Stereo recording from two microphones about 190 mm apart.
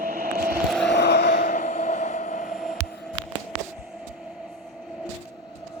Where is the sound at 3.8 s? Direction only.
5° right (ahead or behind).